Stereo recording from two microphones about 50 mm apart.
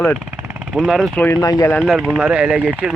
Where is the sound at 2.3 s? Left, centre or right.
Right.